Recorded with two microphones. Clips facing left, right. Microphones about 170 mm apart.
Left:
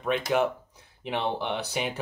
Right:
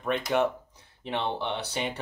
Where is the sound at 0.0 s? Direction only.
5° left (ahead or behind).